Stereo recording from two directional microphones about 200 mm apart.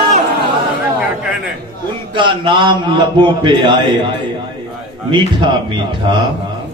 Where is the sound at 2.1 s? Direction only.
25° right (ahead or behind).